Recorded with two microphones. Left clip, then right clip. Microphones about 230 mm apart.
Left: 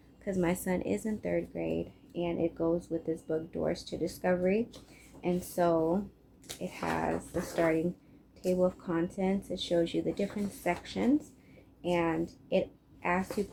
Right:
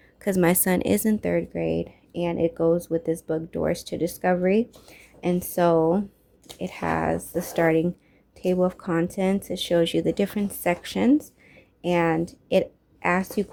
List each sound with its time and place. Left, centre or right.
0.2 s a woman's voice: right